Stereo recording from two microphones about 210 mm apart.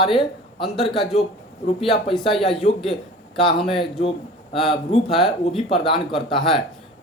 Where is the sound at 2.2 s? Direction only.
25° left (ahead or behind).